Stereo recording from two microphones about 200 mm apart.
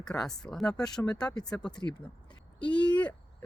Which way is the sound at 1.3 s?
20° left (ahead or behind).